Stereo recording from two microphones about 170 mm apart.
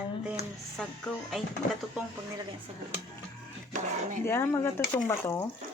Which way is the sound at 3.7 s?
50° right (ahead or behind).